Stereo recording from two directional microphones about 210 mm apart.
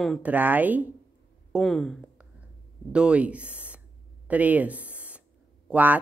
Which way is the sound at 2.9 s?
5° right (ahead or behind).